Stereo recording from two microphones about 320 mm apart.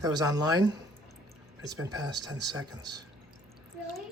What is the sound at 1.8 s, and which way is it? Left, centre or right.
Speech, centre.